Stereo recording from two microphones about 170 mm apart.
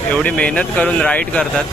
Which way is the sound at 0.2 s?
5° left (ahead or behind).